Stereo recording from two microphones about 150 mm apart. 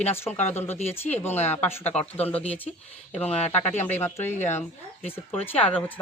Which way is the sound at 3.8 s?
15° left (ahead or behind).